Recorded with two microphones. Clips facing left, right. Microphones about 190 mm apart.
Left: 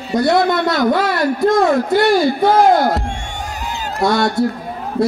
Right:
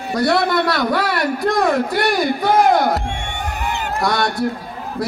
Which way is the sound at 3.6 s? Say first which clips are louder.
Right 3 dB; 60° right (ahead or behind).